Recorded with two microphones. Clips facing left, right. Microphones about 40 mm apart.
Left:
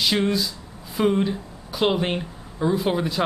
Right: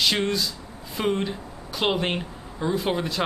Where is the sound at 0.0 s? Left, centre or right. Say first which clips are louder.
Left 2 dB; centre.